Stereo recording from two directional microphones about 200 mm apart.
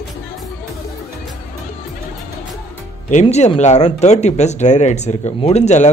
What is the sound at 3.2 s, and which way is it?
Speech, 30° left (ahead or behind).